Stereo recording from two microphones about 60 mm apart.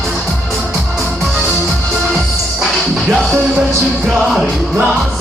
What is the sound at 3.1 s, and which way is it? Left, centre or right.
Music, centre.